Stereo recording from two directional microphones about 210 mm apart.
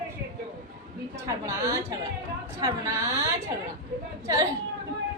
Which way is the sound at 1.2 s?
15° right (ahead or behind).